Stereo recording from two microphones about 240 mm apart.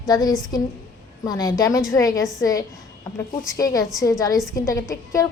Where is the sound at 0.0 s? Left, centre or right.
Centre.